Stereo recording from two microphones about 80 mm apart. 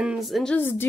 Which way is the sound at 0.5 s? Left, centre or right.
Left.